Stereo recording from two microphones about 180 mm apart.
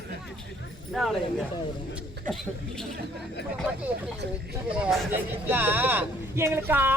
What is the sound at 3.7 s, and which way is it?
Speech, 10° right (ahead or behind).